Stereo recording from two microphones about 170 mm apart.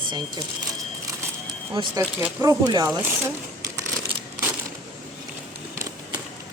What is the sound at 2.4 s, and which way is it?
Speech, 25° right (ahead or behind).